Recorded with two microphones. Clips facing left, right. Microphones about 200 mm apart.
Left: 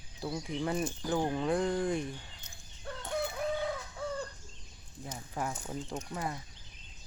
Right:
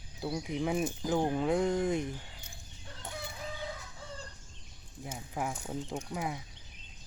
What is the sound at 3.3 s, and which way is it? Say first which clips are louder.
Chicken: left 8 dB; 60° left (ahead or behind).